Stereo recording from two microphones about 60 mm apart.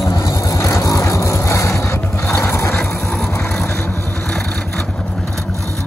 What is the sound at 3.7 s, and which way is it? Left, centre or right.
Vehicle, centre.